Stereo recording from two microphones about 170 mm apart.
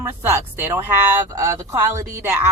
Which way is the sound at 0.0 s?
15° right (ahead or behind).